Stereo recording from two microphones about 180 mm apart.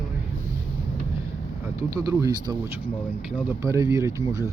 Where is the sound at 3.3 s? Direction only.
10° right (ahead or behind).